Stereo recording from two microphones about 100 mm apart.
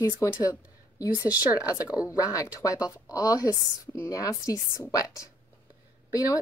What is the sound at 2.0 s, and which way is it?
Speech, 35° left (ahead or behind).